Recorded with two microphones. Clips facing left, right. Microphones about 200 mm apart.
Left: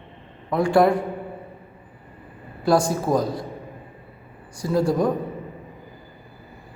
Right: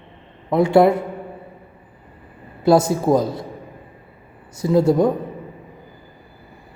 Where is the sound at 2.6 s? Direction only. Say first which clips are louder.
Right 4 dB; 25° right (ahead or behind).